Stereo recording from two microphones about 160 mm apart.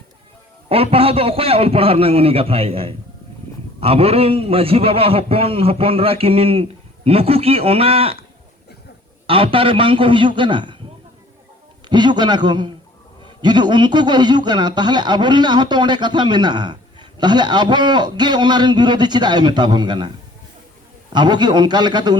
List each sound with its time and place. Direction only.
0.7 s a man's voice: 35° right (ahead or behind)
9.2 s a man's voice: 35° right (ahead or behind)
11.9 s a man's voice: 30° right (ahead or behind)
21.1 s a man's voice: 30° right (ahead or behind)